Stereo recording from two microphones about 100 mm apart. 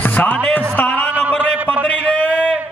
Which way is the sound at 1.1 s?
15° right (ahead or behind).